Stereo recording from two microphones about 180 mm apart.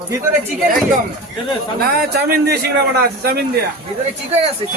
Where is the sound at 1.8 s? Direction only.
60° right (ahead or behind).